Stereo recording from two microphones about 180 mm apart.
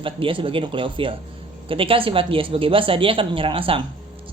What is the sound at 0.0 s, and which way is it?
Speech, 30° right (ahead or behind).